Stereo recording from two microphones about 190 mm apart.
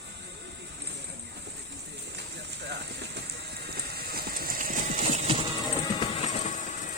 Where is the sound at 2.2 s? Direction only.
60° right (ahead or behind).